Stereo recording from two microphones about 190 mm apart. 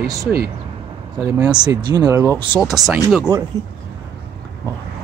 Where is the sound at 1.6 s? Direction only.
20° right (ahead or behind).